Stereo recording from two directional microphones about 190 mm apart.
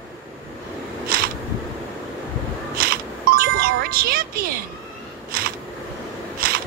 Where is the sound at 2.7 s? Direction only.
50° right (ahead or behind).